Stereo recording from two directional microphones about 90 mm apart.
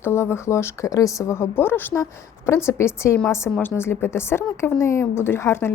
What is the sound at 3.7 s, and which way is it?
Speech, 25° left (ahead or behind).